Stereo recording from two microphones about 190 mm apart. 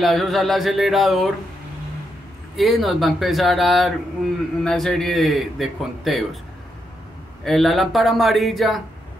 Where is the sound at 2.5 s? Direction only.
Centre (ahead or behind).